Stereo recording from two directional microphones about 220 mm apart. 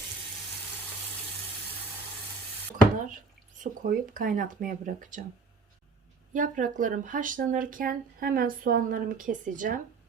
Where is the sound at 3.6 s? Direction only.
40° right (ahead or behind).